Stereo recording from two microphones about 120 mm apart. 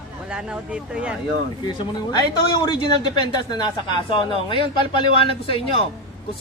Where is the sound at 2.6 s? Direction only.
35° left (ahead or behind).